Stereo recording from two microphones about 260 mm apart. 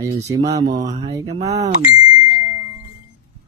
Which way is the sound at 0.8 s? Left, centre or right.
Right.